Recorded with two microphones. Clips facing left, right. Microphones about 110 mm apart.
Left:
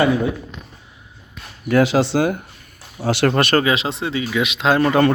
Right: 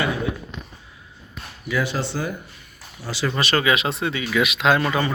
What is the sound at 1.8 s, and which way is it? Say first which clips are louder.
Speech: left 10 dB; 90° left.